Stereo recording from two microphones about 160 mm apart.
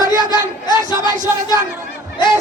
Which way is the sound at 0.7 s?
25° left (ahead or behind).